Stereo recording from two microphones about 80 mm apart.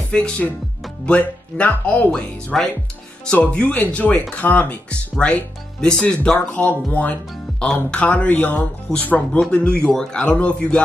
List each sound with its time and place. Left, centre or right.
0.1 s speech: centre
2.0 s speech: centre
7.6 s speech: centre
8.0 s speech: centre